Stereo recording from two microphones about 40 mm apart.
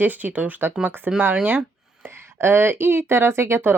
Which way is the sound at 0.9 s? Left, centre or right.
Right.